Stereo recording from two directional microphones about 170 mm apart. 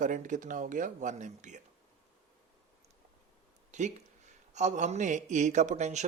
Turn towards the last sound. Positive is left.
turn(degrees=-45)  # may be behind; listen again after turning